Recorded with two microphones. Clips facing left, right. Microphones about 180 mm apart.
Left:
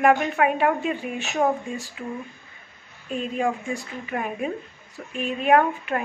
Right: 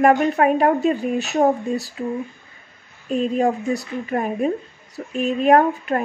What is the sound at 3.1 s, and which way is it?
Speech, 40° right (ahead or behind).